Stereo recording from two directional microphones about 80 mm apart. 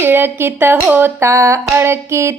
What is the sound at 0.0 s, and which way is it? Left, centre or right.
Speech, right.